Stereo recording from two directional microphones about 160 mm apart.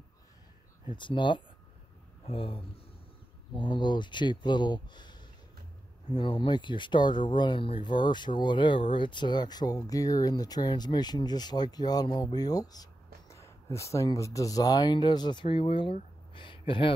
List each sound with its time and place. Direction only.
0.8 s speech: 30° left (ahead or behind)